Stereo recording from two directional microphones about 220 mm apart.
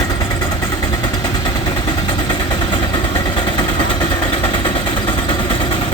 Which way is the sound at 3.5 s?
20° left (ahead or behind).